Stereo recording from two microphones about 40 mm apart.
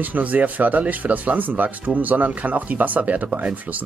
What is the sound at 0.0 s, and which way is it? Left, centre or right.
Speech, right.